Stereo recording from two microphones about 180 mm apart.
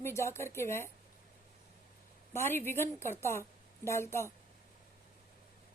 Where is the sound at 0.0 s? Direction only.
15° left (ahead or behind).